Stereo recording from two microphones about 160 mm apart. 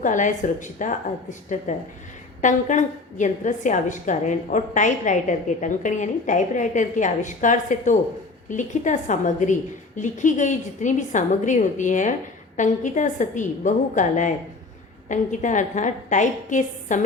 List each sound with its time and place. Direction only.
0.0 s a woman's voice: 50° left (ahead or behind)